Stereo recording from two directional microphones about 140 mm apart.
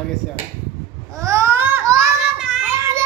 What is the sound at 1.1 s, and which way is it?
Baby cry, 20° right (ahead or behind).